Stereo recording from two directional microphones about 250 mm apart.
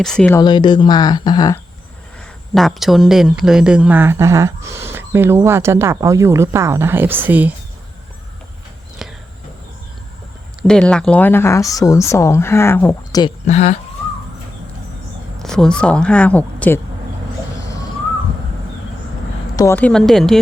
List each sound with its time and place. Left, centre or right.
0.0 s speech: centre
2.6 s speech: centre
9.0 s a sound: centre
10.6 s speech: centre
13.5 s speech: left
15.4 s speech: centre
19.5 s speech: centre